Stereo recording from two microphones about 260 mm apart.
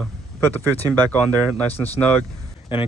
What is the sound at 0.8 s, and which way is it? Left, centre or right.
Speech, centre.